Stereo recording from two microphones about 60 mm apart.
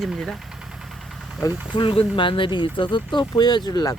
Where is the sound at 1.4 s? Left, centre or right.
Left.